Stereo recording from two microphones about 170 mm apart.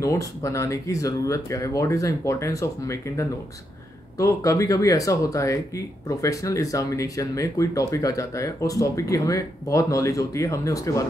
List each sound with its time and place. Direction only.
0.0 s speech: 20° left (ahead or behind)